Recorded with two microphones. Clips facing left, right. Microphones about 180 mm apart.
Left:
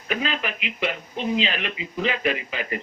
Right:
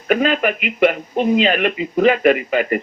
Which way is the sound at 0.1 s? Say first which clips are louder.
Right 11 dB; 55° right (ahead or behind).